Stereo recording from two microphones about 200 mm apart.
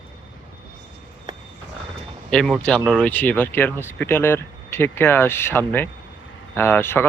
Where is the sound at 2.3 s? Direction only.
5° left (ahead or behind).